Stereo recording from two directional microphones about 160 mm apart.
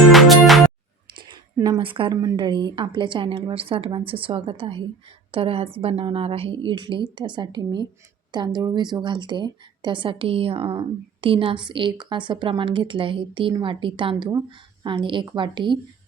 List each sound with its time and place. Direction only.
0.1 s music: centre (ahead or behind)
1.3 s a woman's voice: 25° right (ahead or behind)